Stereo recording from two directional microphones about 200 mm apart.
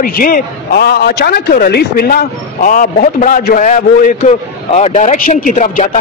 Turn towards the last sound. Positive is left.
turn(degrees=40)  # may be behind; listen again after turning